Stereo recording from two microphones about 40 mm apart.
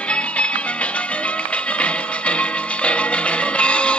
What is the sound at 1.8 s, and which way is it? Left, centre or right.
Music, left.